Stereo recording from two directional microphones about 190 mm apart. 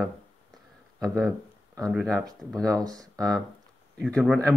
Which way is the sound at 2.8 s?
20° right (ahead or behind).